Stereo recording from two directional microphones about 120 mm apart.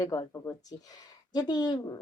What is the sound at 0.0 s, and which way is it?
A woman's voice, 30° left (ahead or behind).